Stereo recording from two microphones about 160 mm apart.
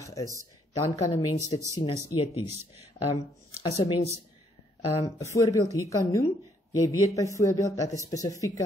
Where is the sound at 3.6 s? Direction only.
20° left (ahead or behind).